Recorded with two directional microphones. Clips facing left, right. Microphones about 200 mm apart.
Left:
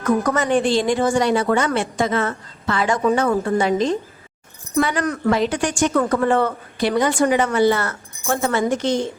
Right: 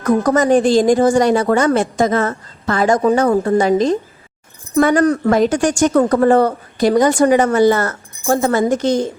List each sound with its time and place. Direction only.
0.2 s a woman's voice: 35° right (ahead or behind)
5.0 s a woman's voice: 35° right (ahead or behind)
5.3 s a woman's voice: 45° right (ahead or behind)